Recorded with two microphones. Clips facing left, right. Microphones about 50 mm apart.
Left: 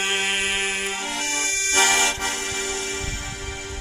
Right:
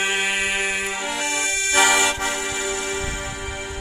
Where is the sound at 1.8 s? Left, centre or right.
Centre.